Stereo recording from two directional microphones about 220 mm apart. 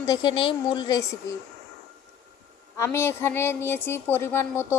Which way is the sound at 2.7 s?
10° left (ahead or behind).